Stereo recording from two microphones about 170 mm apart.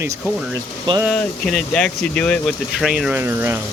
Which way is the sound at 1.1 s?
5° left (ahead or behind).